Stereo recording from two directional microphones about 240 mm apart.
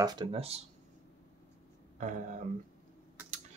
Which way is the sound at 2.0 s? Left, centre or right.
Right.